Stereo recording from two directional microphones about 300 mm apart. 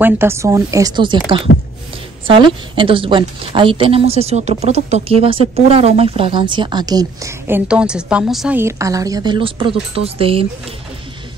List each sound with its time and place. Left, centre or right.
0.0 s a woman's voice: centre
1.5 s speech: left
2.2 s a woman's voice: centre